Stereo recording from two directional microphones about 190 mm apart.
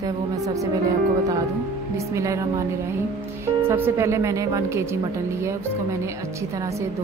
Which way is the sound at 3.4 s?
10° right (ahead or behind).